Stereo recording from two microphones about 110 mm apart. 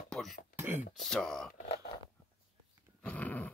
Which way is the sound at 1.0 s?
5° left (ahead or behind).